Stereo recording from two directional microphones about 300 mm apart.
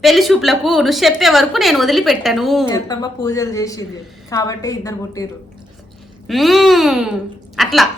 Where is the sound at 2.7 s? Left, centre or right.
Centre.